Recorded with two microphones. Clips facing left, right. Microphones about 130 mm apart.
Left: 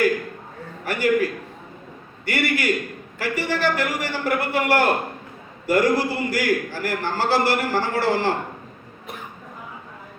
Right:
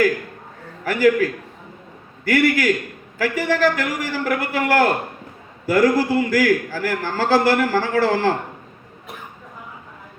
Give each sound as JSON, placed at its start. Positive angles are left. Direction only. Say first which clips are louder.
{"t": 0.9, "sound": "a man's voice", "louder": "right 4 dB", "side_deg": -90}